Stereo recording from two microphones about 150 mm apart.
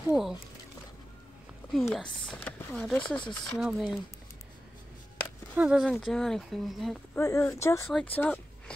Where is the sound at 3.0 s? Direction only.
30° left (ahead or behind).